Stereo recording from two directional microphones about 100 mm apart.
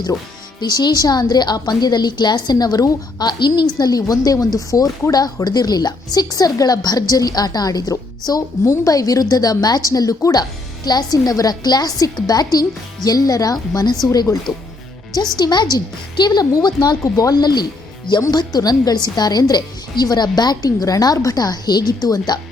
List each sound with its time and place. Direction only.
0.6 s a woman's voice: 45° left (ahead or behind)